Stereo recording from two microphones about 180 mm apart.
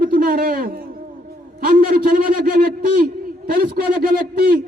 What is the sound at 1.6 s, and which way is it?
A man's voice, 55° right (ahead or behind).